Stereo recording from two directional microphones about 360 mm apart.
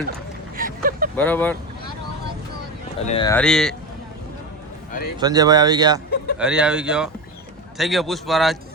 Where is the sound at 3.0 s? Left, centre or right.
Centre.